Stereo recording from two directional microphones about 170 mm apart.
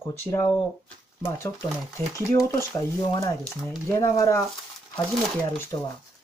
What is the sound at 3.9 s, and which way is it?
Speech, 20° left (ahead or behind).